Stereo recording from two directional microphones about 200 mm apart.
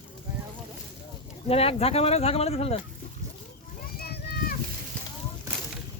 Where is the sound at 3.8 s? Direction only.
50° left (ahead or behind).